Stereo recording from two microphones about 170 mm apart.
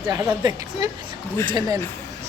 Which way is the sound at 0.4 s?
25° right (ahead or behind).